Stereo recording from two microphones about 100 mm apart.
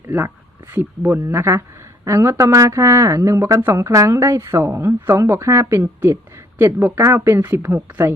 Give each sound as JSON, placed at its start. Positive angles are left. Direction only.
{"t": 0.7, "sound": "a woman's voice", "side_deg": -20}